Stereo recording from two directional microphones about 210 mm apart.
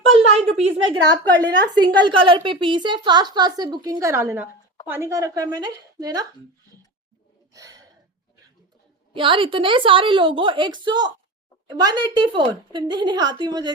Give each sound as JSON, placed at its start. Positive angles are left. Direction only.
{"t": 0.1, "sound": "a sound", "side_deg": -30}
{"t": 1.4, "sound": "a woman's voice", "side_deg": -20}
{"t": 7.5, "sound": "gasp", "side_deg": -15}
{"t": 9.1, "sound": "a woman's voice", "side_deg": -25}